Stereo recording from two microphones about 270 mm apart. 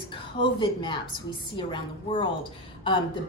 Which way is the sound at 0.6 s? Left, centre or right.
Centre.